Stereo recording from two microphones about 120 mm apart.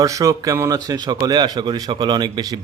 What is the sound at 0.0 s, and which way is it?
Speech, 25° right (ahead or behind).